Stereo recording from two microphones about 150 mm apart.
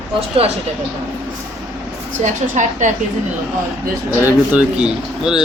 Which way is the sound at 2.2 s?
55° right (ahead or behind).